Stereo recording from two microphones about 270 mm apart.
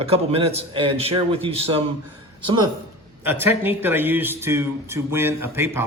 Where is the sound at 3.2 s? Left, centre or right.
Centre.